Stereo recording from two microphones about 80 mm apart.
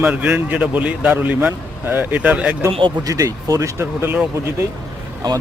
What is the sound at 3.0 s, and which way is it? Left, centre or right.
Speech, right.